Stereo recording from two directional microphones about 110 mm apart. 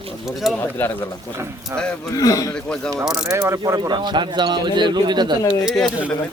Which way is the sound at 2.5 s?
5° left (ahead or behind).